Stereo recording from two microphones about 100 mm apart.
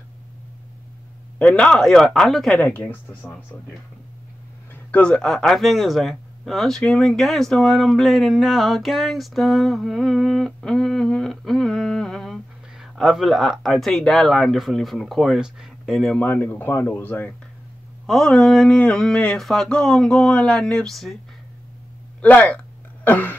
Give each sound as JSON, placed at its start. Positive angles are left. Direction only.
{"t": 1.4, "sound": "speech", "side_deg": 10}
{"t": 2.6, "sound": "speech", "side_deg": 15}
{"t": 4.9, "sound": "speech", "side_deg": 10}
{"t": 16.2, "sound": "speech", "side_deg": 20}
{"t": 18.0, "sound": "speech", "side_deg": 5}
{"t": 22.2, "sound": "speech", "side_deg": 15}
{"t": 23.0, "sound": "a sound", "side_deg": 20}